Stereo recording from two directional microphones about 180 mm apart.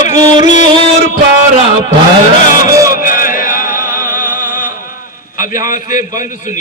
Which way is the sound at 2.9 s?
50° left (ahead or behind).